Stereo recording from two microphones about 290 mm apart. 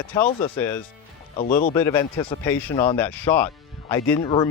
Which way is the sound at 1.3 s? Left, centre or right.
Left.